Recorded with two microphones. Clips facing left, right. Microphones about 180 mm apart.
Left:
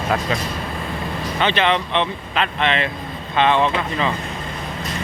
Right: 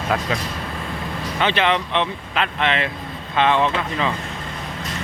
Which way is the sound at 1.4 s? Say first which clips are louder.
Left 1 dB; 5° right (ahead or behind).